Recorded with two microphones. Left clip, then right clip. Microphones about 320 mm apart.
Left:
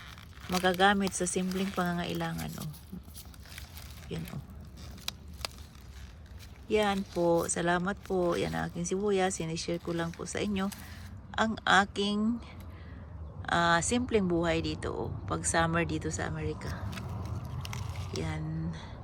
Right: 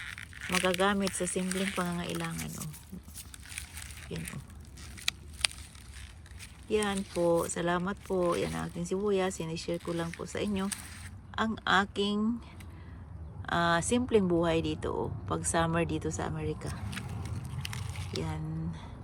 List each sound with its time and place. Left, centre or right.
0.2 s crumpling: centre
0.6 s speech: centre
4.1 s speech: centre
6.7 s speech: centre
16.9 s biting: centre
18.2 s speech: centre